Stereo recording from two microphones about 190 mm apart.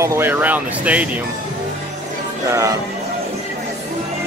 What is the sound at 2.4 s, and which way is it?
Speech, 15° right (ahead or behind).